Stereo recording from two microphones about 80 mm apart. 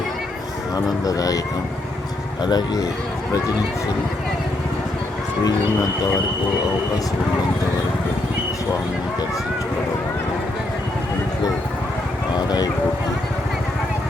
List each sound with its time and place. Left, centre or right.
0.9 s speech: left
2.4 s speech: left
12.5 s speech: left